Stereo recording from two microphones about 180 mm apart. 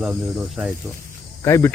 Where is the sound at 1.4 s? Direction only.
15° left (ahead or behind).